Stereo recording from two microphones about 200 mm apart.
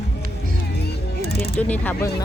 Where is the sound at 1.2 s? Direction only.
50° left (ahead or behind).